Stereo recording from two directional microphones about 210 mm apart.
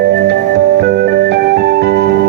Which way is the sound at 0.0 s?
55° right (ahead or behind).